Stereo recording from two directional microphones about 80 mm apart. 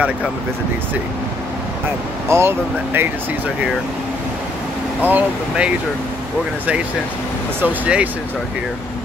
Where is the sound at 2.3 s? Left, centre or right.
Right.